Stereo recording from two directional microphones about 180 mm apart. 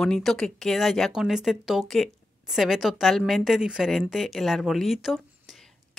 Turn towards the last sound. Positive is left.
turn(degrees=0)  # may be behind; listen again after turning